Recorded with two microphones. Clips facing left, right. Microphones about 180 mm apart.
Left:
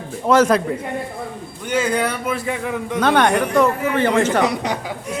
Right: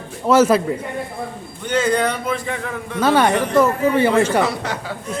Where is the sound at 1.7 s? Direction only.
10° left (ahead or behind).